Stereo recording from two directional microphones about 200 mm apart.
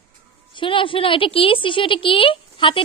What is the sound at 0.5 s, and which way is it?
A woman's voice, 25° left (ahead or behind).